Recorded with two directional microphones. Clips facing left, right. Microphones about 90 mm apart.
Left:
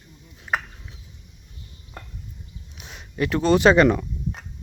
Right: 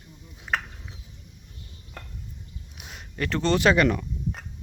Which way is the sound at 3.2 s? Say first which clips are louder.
Left 5 dB; 10° left (ahead or behind).